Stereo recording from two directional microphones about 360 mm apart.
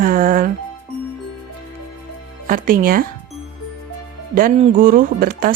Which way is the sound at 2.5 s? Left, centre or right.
Right.